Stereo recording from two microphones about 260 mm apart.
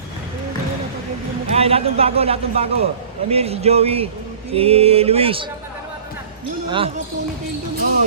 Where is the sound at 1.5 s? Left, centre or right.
Right.